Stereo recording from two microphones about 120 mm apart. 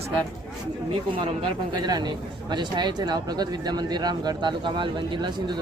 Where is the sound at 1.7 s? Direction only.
35° right (ahead or behind).